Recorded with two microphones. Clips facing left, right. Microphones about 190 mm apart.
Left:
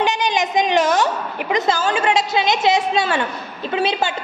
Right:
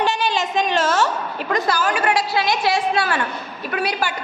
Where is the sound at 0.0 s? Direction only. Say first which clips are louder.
Left 1 dB; 20° left (ahead or behind).